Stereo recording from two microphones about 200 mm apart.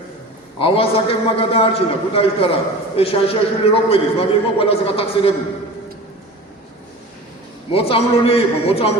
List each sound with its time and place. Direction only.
0.6 s a man's voice: 25° left (ahead or behind)
7.7 s a man's voice: 25° left (ahead or behind)